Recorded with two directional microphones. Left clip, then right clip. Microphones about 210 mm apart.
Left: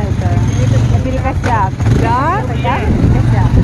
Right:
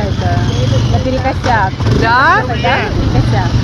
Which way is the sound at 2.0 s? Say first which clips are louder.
Right 6 dB; 5° left (ahead or behind).